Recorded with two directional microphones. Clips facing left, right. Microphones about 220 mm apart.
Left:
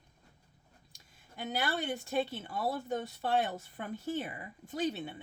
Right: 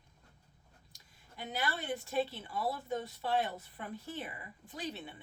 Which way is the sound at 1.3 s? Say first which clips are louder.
Left 4 dB; 45° left (ahead or behind).